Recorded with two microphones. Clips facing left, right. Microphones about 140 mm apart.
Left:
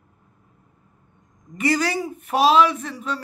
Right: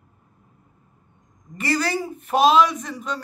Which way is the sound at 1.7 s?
10° left (ahead or behind).